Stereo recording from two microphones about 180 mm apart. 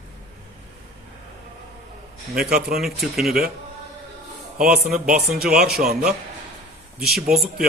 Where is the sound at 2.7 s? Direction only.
Centre (ahead or behind).